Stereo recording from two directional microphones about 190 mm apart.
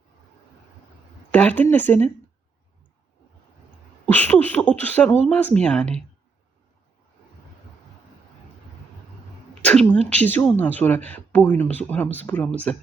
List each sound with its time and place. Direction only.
1.3 s speech: 5° left (ahead or behind)
4.0 s speech: 10° left (ahead or behind)
9.6 s speech: 5° left (ahead or behind)